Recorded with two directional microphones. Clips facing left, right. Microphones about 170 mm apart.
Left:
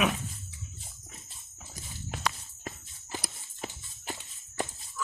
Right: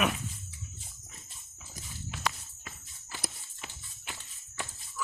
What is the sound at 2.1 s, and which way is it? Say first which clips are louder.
Walk: left 1 dB; 45° left (ahead or behind).